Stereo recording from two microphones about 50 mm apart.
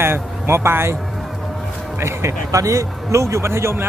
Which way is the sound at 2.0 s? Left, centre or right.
Right.